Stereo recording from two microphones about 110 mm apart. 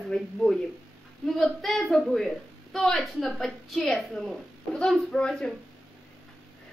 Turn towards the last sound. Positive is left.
turn(degrees=5)  # may be behind; listen again after turning